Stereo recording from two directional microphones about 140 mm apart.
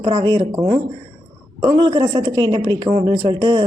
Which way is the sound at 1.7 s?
35° right (ahead or behind).